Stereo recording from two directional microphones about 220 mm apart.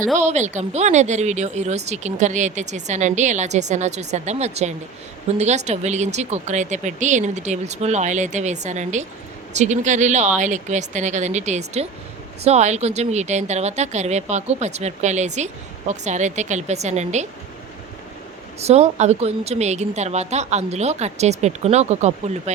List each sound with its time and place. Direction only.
0.2 s speech: 30° right (ahead or behind)
18.6 s speech: 30° right (ahead or behind)